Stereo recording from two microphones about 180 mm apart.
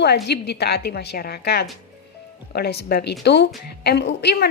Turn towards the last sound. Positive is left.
turn(degrees=70)  # may be behind; listen again after turning